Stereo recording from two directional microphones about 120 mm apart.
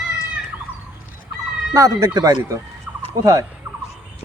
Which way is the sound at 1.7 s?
30° right (ahead or behind).